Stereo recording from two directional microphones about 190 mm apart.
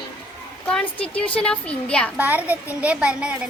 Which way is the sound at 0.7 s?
5° left (ahead or behind).